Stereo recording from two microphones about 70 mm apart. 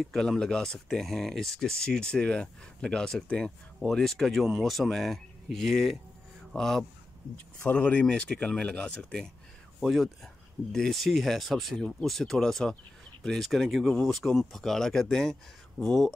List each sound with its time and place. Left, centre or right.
0.0 s speech: centre
7.6 s speech: left
9.8 s speech: centre